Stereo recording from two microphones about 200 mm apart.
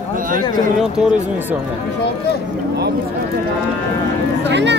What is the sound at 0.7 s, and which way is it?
Cattle, 5° right (ahead or behind).